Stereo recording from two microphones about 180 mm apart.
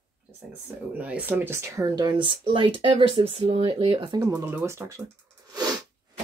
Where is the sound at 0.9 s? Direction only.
10° right (ahead or behind); by 4.2 s 25° right (ahead or behind).